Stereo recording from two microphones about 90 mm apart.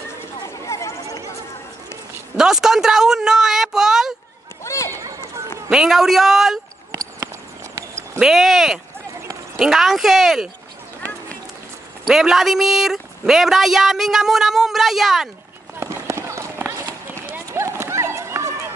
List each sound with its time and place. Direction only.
0.4 s a sound: 35° left (ahead or behind)
2.3 s a woman's voice: 5° right (ahead or behind)
4.6 s run: 35° left (ahead or behind)
5.7 s speech: 5° right (ahead or behind)
6.9 s a sound: 40° right (ahead or behind)
8.2 s a woman's voice: 5° right (ahead or behind)
12.1 s a woman's voice: 5° right (ahead or behind)
15.8 s run: 30° right (ahead or behind)